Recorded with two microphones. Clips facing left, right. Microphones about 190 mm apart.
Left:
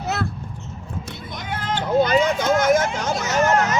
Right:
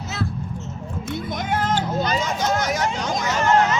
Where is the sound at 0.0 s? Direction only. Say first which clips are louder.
Left 3 dB; 60° left (ahead or behind).